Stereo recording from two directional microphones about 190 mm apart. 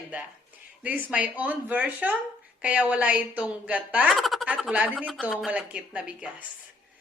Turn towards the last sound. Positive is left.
turn(degrees=-5)  # may be behind; listen again after turning